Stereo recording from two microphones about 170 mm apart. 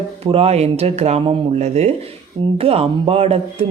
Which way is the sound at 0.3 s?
35° right (ahead or behind).